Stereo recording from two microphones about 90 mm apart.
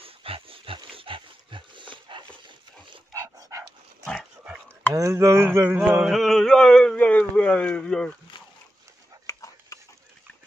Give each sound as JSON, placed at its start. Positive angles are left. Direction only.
{"t": 0.0, "sound": "pig", "side_deg": -90}
{"t": 0.9, "sound": "dog", "side_deg": -75}
{"t": 3.1, "sound": "dog", "side_deg": -40}
{"t": 4.0, "sound": "dog", "side_deg": 5}
{"t": 4.9, "sound": "speech", "side_deg": -35}
{"t": 6.0, "sound": "speech", "side_deg": 0}
{"t": 9.2, "sound": "a sound", "side_deg": 35}